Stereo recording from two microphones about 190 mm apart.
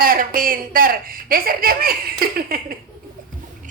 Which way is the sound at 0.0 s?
50° right (ahead or behind).